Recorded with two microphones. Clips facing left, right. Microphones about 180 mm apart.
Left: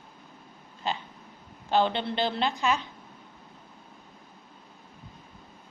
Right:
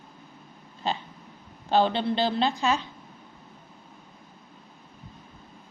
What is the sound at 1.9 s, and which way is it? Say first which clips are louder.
Speech: right 3 dB; 20° left (ahead or behind).